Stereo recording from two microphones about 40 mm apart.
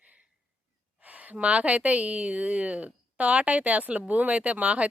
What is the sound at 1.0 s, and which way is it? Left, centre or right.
A woman's voice, right.